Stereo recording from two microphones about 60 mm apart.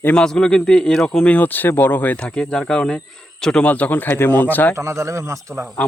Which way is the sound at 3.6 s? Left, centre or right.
Left.